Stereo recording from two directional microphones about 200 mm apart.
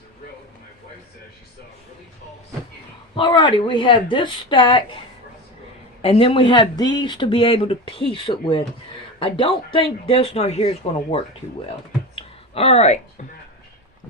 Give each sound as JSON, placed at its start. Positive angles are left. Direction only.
{"t": 3.2, "sound": "speech", "side_deg": 25}
{"t": 6.0, "sound": "speech", "side_deg": 30}
{"t": 12.1, "sound": "a sound", "side_deg": 30}